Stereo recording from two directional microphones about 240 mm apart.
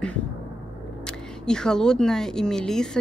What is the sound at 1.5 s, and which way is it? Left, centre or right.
Speech, centre.